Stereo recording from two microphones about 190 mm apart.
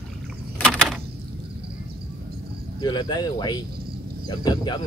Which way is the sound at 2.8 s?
20° left (ahead or behind).